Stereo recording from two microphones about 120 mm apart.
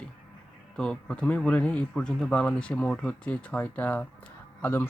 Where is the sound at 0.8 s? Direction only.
10° left (ahead or behind).